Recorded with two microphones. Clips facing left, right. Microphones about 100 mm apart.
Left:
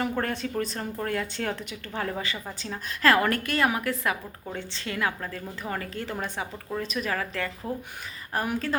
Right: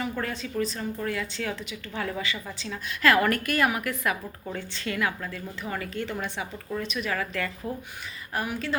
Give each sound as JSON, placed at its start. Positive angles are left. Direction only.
{"t": 0.0, "sound": "a woman's voice", "side_deg": 50}
{"t": 8.3, "sound": "a woman's voice", "side_deg": 40}